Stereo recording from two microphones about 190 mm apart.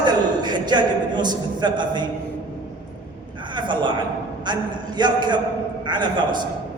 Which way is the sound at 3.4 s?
25° right (ahead or behind).